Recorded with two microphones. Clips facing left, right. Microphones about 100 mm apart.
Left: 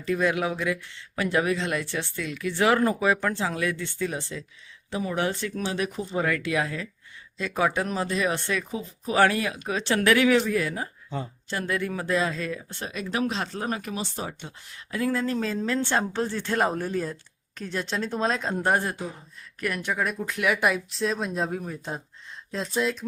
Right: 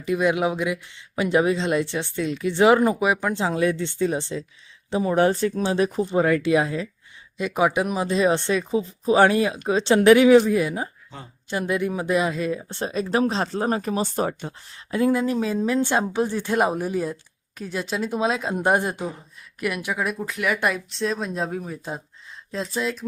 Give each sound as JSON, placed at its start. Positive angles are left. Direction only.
{"t": 0.0, "sound": "speech", "side_deg": -15}
{"t": 14.7, "sound": "speech", "side_deg": -25}
{"t": 18.6, "sound": "speech", "side_deg": -20}
{"t": 19.5, "sound": "speech", "side_deg": -10}